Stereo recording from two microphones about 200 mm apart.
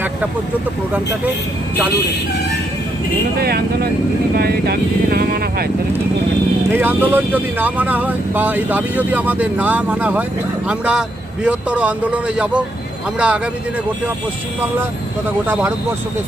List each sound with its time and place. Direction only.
3.3 s speech: 50° right (ahead or behind)
6.7 s speech: 10° right (ahead or behind)